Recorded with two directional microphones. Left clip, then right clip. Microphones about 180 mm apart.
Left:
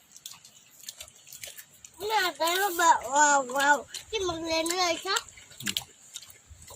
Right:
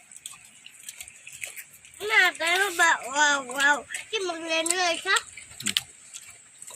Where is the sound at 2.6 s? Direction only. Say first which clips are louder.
Left 2 dB; 30° left (ahead or behind).